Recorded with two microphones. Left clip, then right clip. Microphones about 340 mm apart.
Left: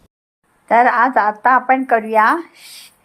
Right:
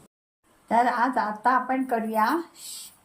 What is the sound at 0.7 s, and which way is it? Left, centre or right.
Speech, centre.